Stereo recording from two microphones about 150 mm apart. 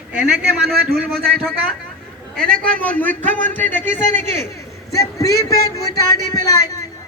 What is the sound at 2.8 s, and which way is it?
Speech, 10° left (ahead or behind).